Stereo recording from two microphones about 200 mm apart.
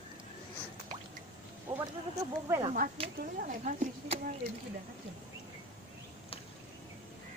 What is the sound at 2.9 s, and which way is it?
A woman's voice, 35° right (ahead or behind).